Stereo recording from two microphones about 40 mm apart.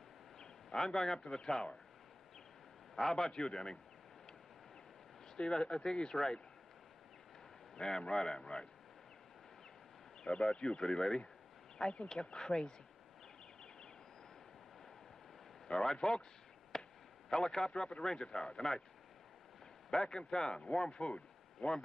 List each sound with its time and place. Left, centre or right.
0.7 s speech: centre
1.2 s speech: left
3.0 s speech: centre
5.3 s speech: centre
7.7 s a man's voice: centre
10.2 s speech: left
11.8 s speech: left
12.1 s speech: centre
15.8 s speech: centre
16.7 s chop: centre
17.5 s speech: centre
19.9 s speech: centre
20.7 s speech: centre